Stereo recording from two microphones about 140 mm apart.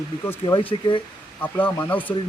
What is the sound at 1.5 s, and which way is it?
Speech, 10° left (ahead or behind).